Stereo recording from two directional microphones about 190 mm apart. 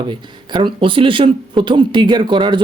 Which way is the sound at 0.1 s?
25° right (ahead or behind).